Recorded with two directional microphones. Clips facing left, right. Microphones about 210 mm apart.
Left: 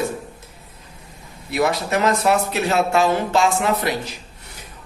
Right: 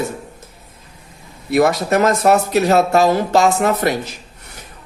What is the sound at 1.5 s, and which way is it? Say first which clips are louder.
Speech: right 6 dB; 45° right (ahead or behind).